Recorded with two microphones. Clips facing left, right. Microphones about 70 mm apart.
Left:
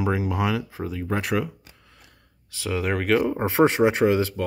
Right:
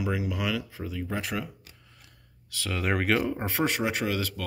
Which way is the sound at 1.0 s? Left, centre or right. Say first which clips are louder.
Left 8 dB; left.